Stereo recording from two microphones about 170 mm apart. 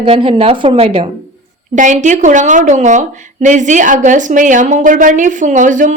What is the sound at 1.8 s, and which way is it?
A woman's voice, 45° right (ahead or behind).